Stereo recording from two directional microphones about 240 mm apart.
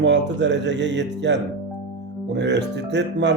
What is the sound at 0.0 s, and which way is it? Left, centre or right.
Speech, right.